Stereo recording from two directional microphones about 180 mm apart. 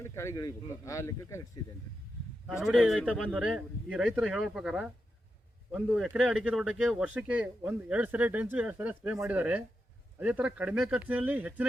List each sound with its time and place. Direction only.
0.0 s speech: 15° left (ahead or behind)
2.7 s speech: centre (ahead or behind)